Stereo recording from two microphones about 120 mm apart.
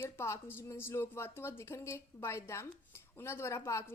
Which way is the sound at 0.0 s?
20° left (ahead or behind).